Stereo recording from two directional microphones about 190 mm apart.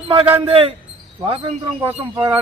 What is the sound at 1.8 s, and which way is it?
Speech, 20° right (ahead or behind).